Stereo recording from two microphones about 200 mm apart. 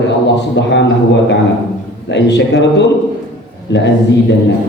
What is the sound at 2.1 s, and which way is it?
Speech, 60° left (ahead or behind).